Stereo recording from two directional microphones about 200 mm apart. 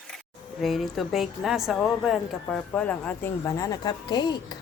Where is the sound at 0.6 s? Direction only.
Centre (ahead or behind); by 4.5 s 20° left (ahead or behind).